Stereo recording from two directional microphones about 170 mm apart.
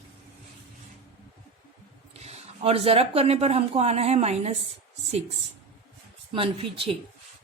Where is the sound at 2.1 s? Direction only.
40° right (ahead or behind).